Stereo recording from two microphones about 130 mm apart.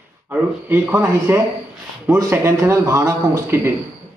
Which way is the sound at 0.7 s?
15° right (ahead or behind).